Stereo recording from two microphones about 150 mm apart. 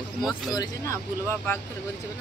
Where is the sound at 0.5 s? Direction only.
20° left (ahead or behind).